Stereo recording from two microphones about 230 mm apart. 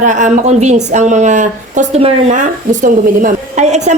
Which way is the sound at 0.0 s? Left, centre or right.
Right.